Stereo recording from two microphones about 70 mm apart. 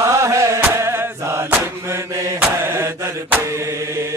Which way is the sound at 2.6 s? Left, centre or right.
Right.